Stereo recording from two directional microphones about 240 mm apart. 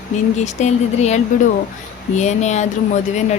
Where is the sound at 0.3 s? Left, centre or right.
Left.